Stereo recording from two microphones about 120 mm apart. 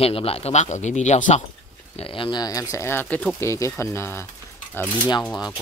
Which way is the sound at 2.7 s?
20° left (ahead or behind).